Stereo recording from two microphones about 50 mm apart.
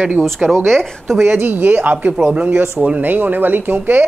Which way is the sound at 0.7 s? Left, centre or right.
Centre.